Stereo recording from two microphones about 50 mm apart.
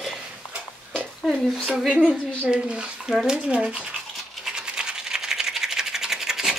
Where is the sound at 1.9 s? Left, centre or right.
Centre.